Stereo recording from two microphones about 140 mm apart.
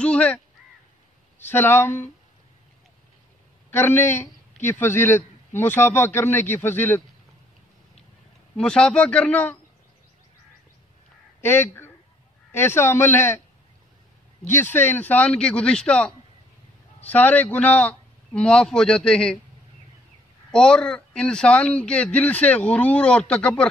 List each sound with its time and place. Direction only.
0.0 s speech: 10° left (ahead or behind)
1.5 s a man's voice: 15° left (ahead or behind)
3.7 s a man's voice: 15° left (ahead or behind)
8.5 s a man's voice: 5° left (ahead or behind)
11.4 s a man's voice: 15° left (ahead or behind)
14.5 s a man's voice: 15° left (ahead or behind)
20.5 s a man's voice: 5° left (ahead or behind)